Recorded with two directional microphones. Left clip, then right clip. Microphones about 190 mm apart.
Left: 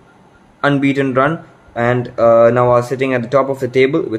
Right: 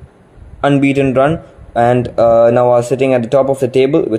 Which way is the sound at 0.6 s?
15° right (ahead or behind).